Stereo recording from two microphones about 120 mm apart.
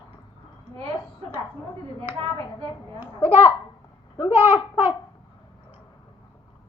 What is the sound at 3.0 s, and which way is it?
Babbling, 20° right (ahead or behind).